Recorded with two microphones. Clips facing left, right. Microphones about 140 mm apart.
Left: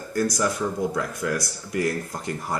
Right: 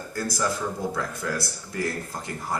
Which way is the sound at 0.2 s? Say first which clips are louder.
Left 6 dB; 20° left (ahead or behind).